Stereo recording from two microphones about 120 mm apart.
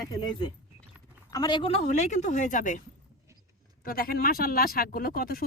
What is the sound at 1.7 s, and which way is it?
Speech, 80° left.